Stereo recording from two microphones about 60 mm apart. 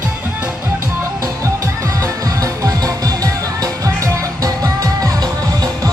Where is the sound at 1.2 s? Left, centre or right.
Right.